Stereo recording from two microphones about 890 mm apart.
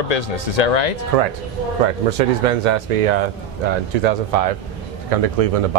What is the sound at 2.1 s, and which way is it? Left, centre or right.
Speech, right.